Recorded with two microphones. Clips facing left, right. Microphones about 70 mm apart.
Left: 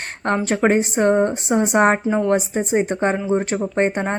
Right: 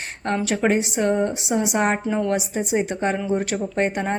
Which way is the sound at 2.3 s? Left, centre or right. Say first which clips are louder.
Left 4 dB; left.